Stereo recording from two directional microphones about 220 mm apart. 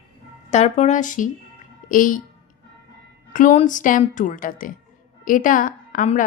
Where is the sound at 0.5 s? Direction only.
30° left (ahead or behind).